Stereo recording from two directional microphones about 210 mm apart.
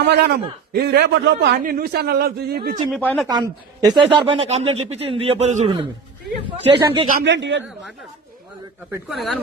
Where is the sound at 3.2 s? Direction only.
15° right (ahead or behind).